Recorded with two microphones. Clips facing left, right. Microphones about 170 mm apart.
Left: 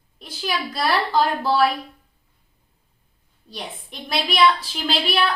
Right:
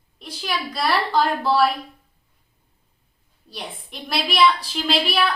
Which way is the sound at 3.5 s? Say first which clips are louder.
Left 1 dB; centre (ahead or behind).